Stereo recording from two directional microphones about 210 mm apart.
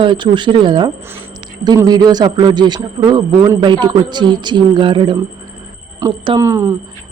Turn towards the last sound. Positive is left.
turn(degrees=-15)  # may be behind; listen again after turning